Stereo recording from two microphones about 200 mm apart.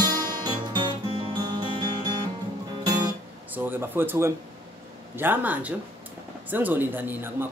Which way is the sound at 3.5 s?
10° right (ahead or behind).